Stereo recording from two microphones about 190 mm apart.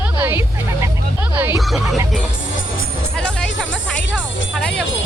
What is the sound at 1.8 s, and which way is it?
Music, 15° right (ahead or behind).